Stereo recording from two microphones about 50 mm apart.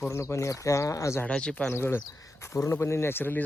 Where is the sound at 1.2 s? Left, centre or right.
Left.